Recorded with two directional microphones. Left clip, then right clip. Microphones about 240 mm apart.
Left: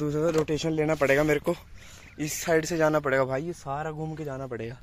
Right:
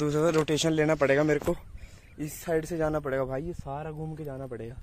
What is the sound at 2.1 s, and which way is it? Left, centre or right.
Speech, left.